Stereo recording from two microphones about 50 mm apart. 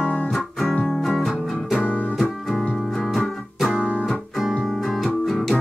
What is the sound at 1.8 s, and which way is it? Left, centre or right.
Music, left.